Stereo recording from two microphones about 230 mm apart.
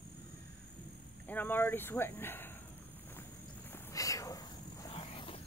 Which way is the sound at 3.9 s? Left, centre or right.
Centre.